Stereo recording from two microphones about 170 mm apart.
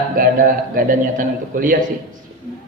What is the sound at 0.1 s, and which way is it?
A man's voice, 55° right (ahead or behind).